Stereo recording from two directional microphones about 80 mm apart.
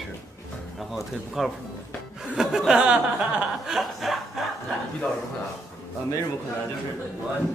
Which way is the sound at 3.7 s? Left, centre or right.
Centre.